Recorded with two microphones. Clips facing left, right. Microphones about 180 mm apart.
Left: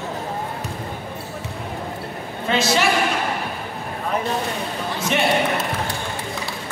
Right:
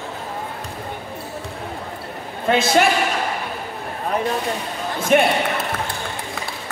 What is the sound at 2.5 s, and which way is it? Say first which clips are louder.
Speech: right 3 dB; 55° right (ahead or behind).